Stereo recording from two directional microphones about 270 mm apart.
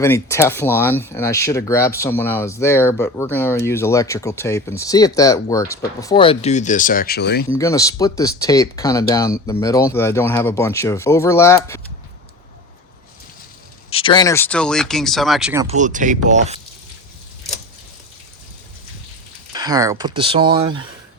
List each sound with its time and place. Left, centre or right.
0.0 s speech: centre; by 7.4 s left
7.5 s speech: centre
13.9 s speech: centre
15.6 s speech: right
19.5 s speech: centre